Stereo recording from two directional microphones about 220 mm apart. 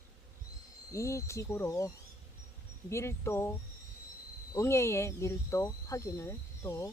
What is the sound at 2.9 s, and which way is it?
Speech, 10° left (ahead or behind).